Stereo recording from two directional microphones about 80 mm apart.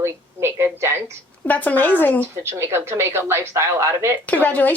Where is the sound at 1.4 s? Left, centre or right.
Left.